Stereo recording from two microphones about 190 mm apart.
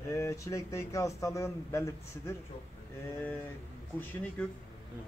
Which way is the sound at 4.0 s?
10° left (ahead or behind).